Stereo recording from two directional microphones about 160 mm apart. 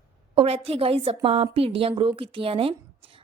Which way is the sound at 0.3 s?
35° right (ahead or behind).